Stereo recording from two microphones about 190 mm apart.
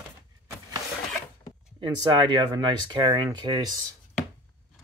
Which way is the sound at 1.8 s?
25° right (ahead or behind).